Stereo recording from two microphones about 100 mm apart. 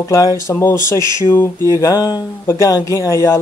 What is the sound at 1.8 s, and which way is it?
Speech, 40° left (ahead or behind).